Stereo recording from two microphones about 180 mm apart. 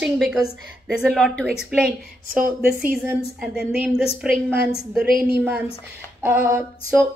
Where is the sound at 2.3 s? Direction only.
50° right (ahead or behind).